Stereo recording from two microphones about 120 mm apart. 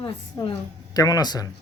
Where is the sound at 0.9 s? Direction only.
30° left (ahead or behind).